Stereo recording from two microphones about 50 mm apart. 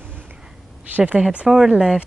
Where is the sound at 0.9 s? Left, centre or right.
Right.